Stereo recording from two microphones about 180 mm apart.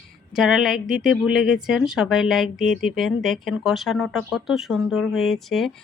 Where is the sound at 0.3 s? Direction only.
Centre (ahead or behind).